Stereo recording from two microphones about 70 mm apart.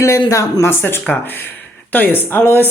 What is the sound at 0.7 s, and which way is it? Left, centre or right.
A woman's voice, left.